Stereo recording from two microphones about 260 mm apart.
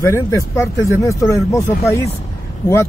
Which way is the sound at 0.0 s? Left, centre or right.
Centre.